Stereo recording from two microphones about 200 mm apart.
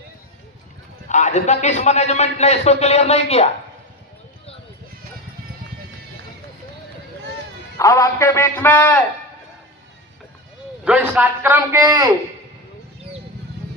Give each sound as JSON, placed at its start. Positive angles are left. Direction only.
{"t": 1.0, "sound": "a man's voice", "side_deg": 35}
{"t": 7.8, "sound": "a man's voice", "side_deg": 15}
{"t": 10.8, "sound": "a man's voice", "side_deg": -5}